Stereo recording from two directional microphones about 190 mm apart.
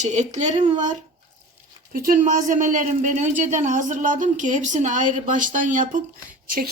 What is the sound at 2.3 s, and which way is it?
Speech, 45° right (ahead or behind).